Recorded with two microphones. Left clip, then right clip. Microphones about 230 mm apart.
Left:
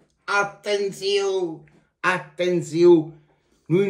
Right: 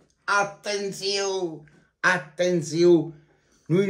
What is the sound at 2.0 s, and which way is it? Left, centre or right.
Speech, right.